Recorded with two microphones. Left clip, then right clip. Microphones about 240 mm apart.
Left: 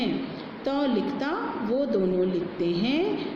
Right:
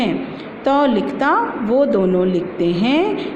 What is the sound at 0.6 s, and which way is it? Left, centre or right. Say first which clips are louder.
Speech: right 11 dB; right.